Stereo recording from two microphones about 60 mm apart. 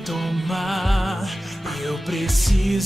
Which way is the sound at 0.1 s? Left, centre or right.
Centre.